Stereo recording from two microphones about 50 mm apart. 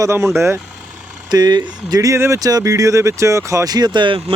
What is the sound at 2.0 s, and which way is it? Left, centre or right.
Speech, right.